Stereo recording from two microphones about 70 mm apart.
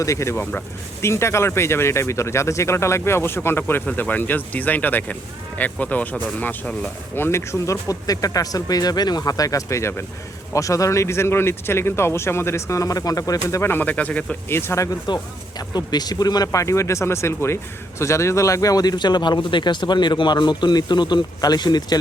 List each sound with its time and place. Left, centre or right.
0.0 s speech: left
7.2 s speech: left
9.3 s speech: left
13.6 s speech: left
14.5 s speech: left
15.0 s speech: left
16.6 s speech: left